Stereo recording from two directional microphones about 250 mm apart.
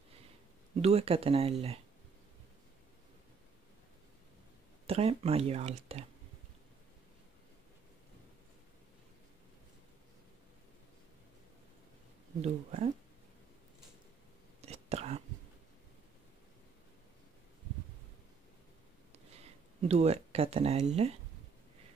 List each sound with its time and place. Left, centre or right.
0.7 s speech: right
4.8 s speech: right
12.4 s speech: right
14.6 s whispering: right
19.1 s a sound: right